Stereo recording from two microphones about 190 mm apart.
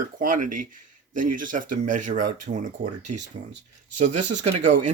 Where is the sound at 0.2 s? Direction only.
45° right (ahead or behind).